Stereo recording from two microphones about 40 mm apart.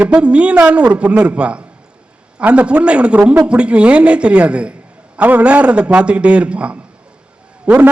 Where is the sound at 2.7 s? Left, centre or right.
Right.